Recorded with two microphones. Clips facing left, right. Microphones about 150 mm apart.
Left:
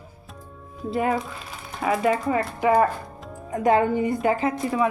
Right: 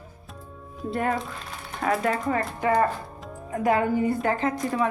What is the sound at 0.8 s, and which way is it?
Speech, 5° left (ahead or behind).